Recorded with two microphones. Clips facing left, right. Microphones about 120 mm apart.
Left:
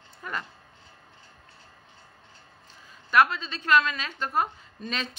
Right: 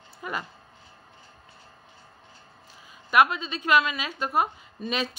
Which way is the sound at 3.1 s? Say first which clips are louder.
Right 1 dB; 15° right (ahead or behind).